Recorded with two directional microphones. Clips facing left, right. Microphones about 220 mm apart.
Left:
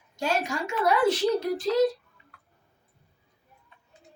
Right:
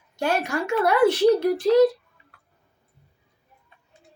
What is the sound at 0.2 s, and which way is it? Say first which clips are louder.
Speech: right 4 dB; 60° right (ahead or behind).